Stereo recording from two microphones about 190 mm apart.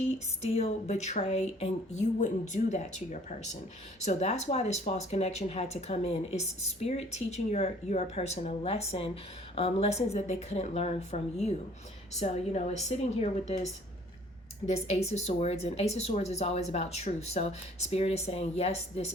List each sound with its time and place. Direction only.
0.4 s speech: 35° left (ahead or behind)
14.7 s speech: 35° left (ahead or behind)